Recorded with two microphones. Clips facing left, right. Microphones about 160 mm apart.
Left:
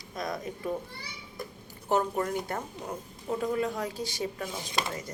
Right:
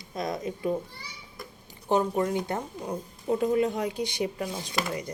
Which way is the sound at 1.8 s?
20° right (ahead or behind).